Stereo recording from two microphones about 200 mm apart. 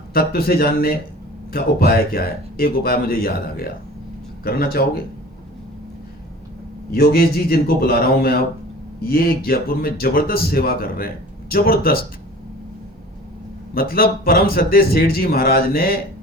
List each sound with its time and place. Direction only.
0.1 s a man's voice: 50° left (ahead or behind)
6.9 s a man's voice: 50° left (ahead or behind)
13.7 s a man's voice: 45° left (ahead or behind)